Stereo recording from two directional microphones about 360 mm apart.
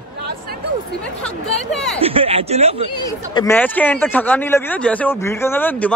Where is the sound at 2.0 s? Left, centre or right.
Centre.